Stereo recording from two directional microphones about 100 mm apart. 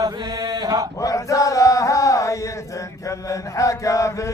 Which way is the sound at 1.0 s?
35° left (ahead or behind).